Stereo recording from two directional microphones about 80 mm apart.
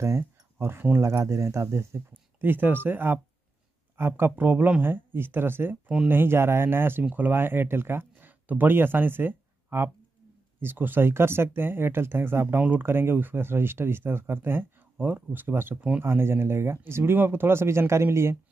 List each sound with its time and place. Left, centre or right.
0.0 s speech: right
16.1 s speech: right